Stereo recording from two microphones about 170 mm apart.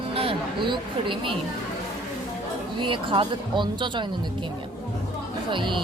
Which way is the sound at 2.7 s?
30° right (ahead or behind).